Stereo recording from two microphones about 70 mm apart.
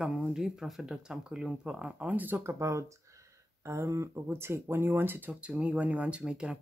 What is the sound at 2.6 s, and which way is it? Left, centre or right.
Speech, right.